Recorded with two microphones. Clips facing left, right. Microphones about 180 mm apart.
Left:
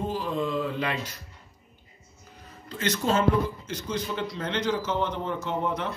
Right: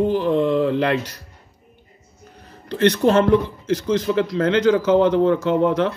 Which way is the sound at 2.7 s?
65° right (ahead or behind).